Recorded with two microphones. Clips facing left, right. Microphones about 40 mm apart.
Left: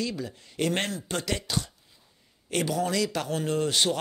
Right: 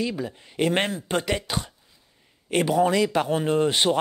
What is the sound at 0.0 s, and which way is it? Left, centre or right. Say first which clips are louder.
Speech: right 4 dB; right.